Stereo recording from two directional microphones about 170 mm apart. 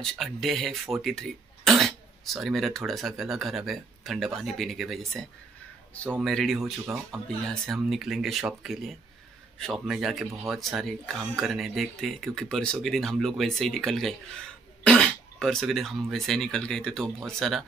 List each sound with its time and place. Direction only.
0.0 s speech: centre (ahead or behind)
6.2 s speech: centre (ahead or behind)